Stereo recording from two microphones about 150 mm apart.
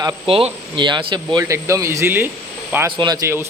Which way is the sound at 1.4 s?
20° right (ahead or behind).